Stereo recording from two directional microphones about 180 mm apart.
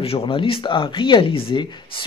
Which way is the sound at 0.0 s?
30° left (ahead or behind).